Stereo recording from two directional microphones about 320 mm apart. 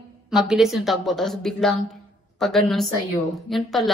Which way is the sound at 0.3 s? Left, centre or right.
Centre.